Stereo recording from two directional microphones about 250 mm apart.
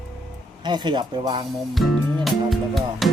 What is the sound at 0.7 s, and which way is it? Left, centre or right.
Speech, centre.